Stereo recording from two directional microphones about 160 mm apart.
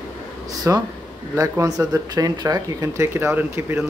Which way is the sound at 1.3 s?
20° right (ahead or behind).